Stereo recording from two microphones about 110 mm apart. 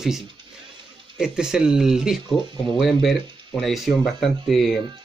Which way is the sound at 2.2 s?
45° right (ahead or behind).